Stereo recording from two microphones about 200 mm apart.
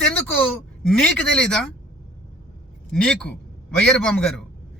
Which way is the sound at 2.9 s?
5° left (ahead or behind).